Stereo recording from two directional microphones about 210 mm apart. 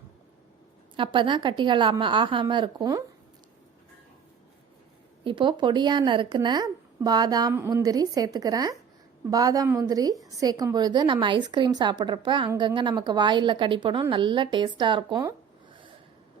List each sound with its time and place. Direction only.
0.9 s a woman's voice: 25° right (ahead or behind)
5.2 s a woman's voice: 25° right (ahead or behind)